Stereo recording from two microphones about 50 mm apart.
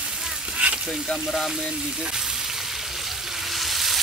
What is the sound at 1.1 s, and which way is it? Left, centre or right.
Speech, centre.